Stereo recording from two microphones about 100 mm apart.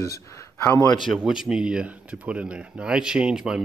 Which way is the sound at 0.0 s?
30° left (ahead or behind).